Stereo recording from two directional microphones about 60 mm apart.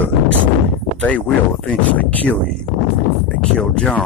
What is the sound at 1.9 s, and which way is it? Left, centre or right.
Speech, left.